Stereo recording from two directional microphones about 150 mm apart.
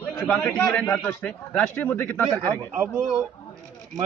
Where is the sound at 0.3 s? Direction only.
10° left (ahead or behind).